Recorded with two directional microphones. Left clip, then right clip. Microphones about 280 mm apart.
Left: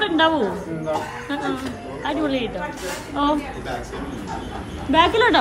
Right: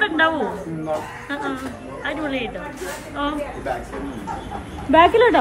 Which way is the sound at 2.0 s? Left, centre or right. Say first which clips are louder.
Left 2 dB; centre.